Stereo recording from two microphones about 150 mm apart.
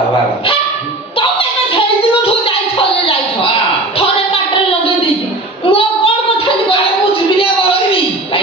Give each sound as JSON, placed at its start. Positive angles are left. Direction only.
{"t": 5.7, "sound": "child singing", "side_deg": 40}